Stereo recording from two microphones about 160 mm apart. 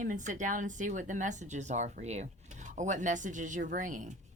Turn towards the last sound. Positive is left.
turn(degrees=-55)  # may be behind; listen again after turning